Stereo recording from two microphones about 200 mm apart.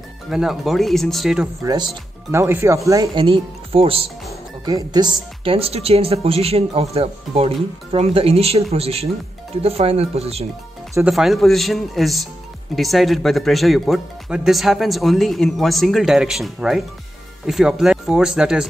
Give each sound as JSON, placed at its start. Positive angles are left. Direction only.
{"t": 0.3, "sound": "speech", "side_deg": 0}
{"t": 1.6, "sound": "speech", "side_deg": -20}
{"t": 11.1, "sound": "speech", "side_deg": 0}